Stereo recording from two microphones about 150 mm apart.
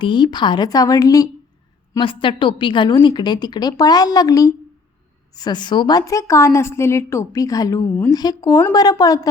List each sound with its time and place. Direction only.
0.0 s a woman's voice: 30° left (ahead or behind)
2.0 s a woman's voice: 35° left (ahead or behind)
7.9 s a woman's voice: 10° left (ahead or behind)
8.1 s a woman's voice: 25° left (ahead or behind)